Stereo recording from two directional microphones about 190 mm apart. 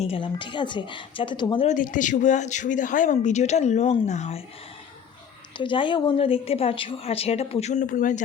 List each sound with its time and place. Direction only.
0.0 s a woman's voice: 30° left (ahead or behind)
1.6 s speech: 45° left (ahead or behind)
5.5 s speech: 25° left (ahead or behind); by 8.2 s 45° left (ahead or behind)